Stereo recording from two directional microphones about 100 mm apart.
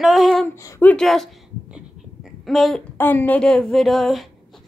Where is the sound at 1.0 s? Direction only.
5° left (ahead or behind).